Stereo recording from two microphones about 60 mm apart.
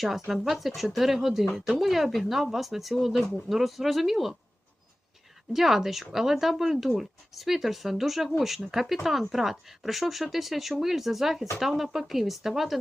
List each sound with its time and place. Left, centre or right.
0.3 s speech: centre
5.5 s speech: centre